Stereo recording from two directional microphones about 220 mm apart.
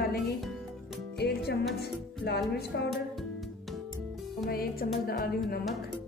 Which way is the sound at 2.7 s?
50° left (ahead or behind).